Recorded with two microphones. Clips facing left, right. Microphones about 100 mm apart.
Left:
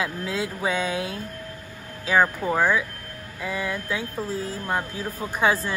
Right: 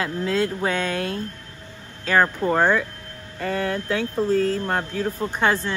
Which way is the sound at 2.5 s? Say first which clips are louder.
Right 2 dB; 55° right (ahead or behind).